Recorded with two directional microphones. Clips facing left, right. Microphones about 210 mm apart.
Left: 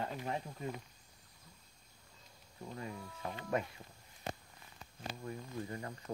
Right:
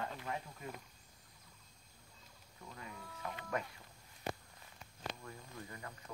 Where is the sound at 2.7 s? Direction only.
30° left (ahead or behind).